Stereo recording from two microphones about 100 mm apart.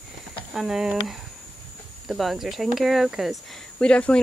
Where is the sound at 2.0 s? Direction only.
5° right (ahead or behind).